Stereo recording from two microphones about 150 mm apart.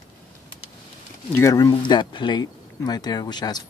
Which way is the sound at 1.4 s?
20° left (ahead or behind).